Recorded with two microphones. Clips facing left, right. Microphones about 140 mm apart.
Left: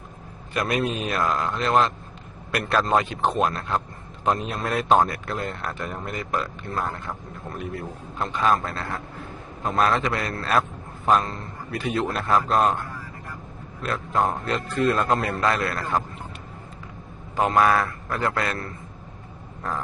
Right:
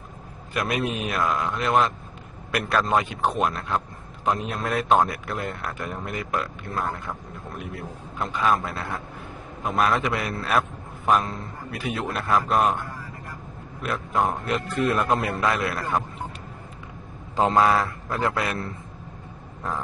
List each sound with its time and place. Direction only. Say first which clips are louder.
0.6 s a man's voice: left 1 dB; centre (ahead or behind)
13.8 s a man's voice: left 1 dB; centre (ahead or behind)
17.4 s a man's voice: even; 25° right (ahead or behind)